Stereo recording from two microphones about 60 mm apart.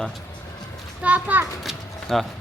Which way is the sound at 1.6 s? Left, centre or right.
Centre.